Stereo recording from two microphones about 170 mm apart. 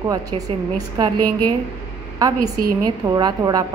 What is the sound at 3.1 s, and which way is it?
Speech, 20° right (ahead or behind).